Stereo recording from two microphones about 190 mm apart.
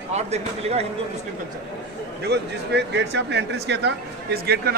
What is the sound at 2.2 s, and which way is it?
Speech, 65° right (ahead or behind).